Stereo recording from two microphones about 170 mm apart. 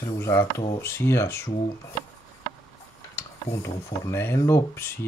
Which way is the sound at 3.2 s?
15° left (ahead or behind).